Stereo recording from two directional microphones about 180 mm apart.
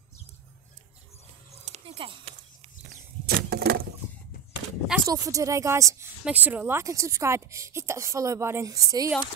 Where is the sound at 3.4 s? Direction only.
65° right (ahead or behind).